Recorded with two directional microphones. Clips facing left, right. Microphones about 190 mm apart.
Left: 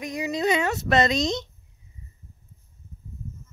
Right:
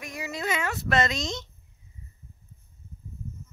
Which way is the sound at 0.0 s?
20° left (ahead or behind).